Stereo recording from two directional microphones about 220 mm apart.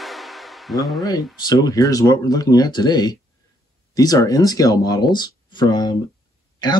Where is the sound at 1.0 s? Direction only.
20° left (ahead or behind).